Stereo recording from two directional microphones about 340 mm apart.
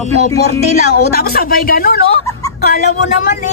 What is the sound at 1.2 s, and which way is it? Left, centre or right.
Speech, left.